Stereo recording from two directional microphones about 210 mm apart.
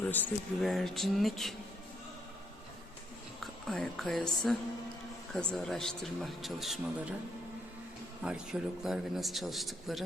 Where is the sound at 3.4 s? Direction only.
Centre (ahead or behind).